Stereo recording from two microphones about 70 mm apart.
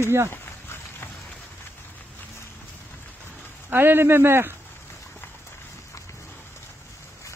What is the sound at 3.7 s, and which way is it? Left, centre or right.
Speech, right.